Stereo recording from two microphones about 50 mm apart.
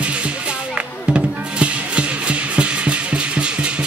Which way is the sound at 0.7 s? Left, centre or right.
Right.